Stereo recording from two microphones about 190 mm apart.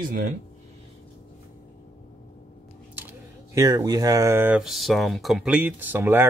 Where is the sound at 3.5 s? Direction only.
20° right (ahead or behind).